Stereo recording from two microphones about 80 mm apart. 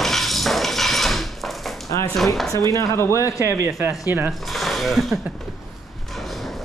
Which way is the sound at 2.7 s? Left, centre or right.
Left.